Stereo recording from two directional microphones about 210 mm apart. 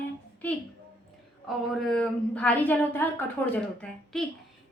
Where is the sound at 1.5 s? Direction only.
Centre (ahead or behind).